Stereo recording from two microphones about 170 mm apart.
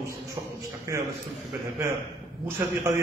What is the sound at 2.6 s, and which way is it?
Speech, 15° right (ahead or behind).